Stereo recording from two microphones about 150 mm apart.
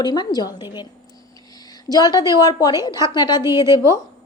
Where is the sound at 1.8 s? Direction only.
25° left (ahead or behind).